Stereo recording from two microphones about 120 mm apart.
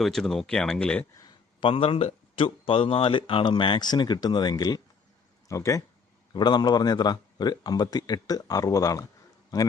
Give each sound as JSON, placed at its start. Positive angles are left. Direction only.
{"t": 0.0, "sound": "speech", "side_deg": 5}
{"t": 1.6, "sound": "a man's voice", "side_deg": 50}
{"t": 6.3, "sound": "a man's voice", "side_deg": 35}